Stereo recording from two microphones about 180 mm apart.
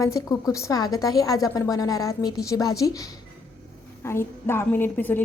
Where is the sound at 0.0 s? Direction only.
20° left (ahead or behind).